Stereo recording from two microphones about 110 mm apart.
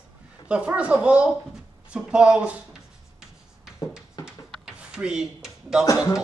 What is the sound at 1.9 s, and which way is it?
Writing, 10° right (ahead or behind).